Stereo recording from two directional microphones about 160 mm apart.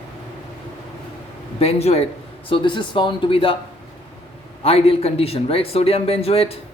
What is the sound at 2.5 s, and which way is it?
A man's voice, 30° left (ahead or behind).